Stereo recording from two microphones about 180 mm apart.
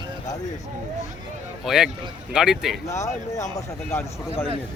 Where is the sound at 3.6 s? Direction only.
10° left (ahead or behind).